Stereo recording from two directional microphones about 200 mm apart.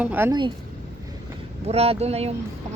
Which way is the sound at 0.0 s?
10° right (ahead or behind).